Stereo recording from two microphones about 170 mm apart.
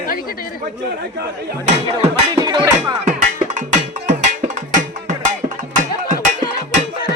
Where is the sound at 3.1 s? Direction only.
50° right (ahead or behind).